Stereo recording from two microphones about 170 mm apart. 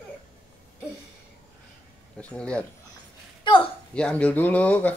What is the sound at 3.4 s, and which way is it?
Speech, 30° left (ahead or behind).